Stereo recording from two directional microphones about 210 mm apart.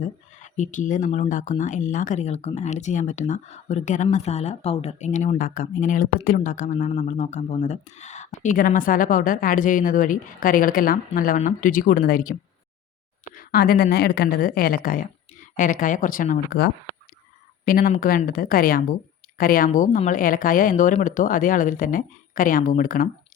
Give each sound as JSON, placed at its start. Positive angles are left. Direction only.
{"t": 0.0, "sound": "speech", "side_deg": 35}
{"t": 13.3, "sound": "speech", "side_deg": 45}
{"t": 17.7, "sound": "speech", "side_deg": 40}